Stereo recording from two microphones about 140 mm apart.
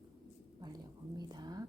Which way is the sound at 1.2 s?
30° right (ahead or behind).